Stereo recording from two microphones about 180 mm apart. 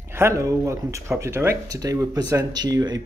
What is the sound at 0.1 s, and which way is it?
A man's voice, 15° right (ahead or behind).